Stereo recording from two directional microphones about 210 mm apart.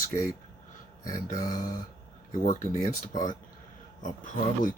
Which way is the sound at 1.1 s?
40° left (ahead or behind).